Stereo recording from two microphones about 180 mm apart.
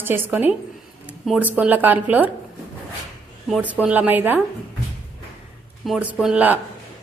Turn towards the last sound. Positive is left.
turn(degrees=-10)  # may be behind; listen again after turning